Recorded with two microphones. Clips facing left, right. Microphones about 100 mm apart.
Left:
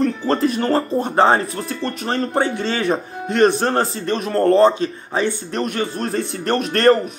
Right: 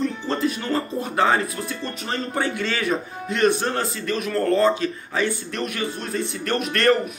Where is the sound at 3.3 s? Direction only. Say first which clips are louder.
Left 5 dB; 40° left (ahead or behind).